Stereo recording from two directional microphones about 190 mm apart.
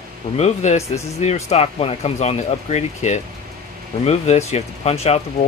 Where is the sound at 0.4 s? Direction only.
35° left (ahead or behind).